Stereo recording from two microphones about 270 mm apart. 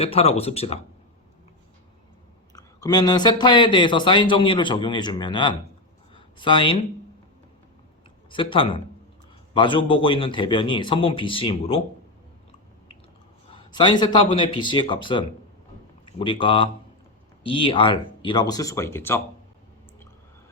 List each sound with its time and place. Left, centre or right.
0.0 s a man's voice: left
2.6 s speech: centre
8.3 s a man's voice: centre
13.5 s speech: centre